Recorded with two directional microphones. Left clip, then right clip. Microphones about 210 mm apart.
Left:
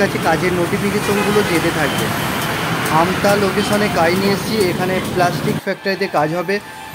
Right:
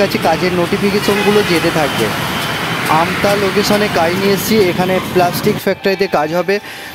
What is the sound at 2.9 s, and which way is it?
Speech, 35° right (ahead or behind).